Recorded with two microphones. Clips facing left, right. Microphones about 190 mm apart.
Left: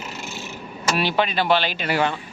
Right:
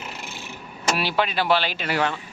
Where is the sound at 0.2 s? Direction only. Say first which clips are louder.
Left 4 dB; 55° right (ahead or behind).